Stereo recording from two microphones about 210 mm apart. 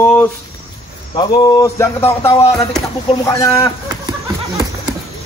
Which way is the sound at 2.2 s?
25° left (ahead or behind).